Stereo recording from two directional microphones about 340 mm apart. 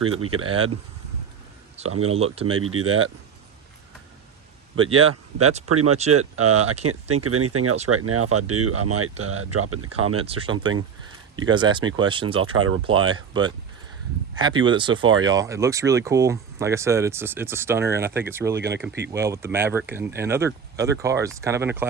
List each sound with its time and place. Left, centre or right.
0.0 s speech: right
1.8 s speech: centre
2.5 s speech: right
4.8 s speech: right
6.6 s speech: centre
6.8 s speech: right
10.2 s speech: centre